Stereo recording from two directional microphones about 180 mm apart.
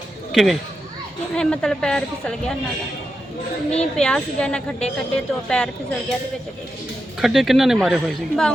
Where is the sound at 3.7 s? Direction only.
5° left (ahead or behind).